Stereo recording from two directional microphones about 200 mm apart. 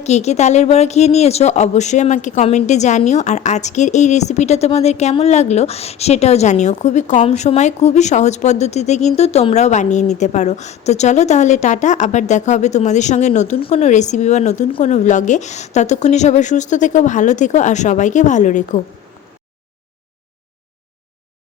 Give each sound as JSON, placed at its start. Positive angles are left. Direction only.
{"t": 0.0, "sound": "a woman's voice", "side_deg": 35}